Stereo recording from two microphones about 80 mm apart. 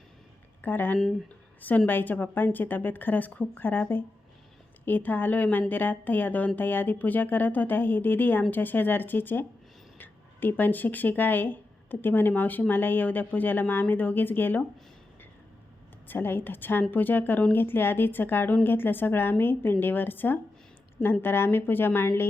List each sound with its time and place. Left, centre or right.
0.6 s speech: left
16.0 s speech: left